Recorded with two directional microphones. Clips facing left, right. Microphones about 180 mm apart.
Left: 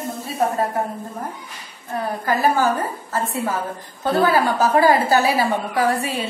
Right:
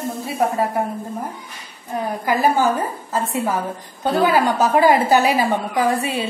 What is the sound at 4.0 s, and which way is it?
A woman's voice, 15° right (ahead or behind).